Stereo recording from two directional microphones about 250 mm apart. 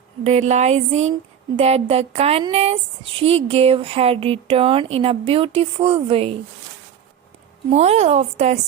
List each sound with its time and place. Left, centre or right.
0.3 s speech: right
7.7 s speech: right